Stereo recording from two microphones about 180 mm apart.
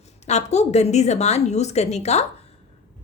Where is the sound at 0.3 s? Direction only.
40° left (ahead or behind).